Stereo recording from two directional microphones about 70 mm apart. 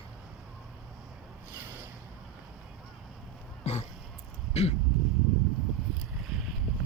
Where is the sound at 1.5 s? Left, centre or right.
Right.